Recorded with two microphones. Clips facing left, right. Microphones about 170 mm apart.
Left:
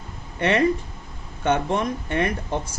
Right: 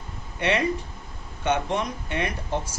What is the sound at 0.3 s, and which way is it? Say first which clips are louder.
A man's voice: left 4 dB; 50° left (ahead or behind).